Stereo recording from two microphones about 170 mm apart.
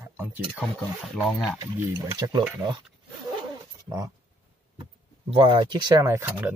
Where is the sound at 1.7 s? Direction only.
20° right (ahead or behind).